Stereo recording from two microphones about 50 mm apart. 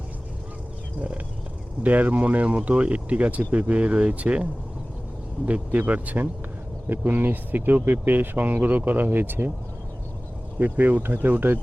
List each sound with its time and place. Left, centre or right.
1.8 s speech: right
5.4 s speech: left
5.7 s speech: right
10.6 s speech: right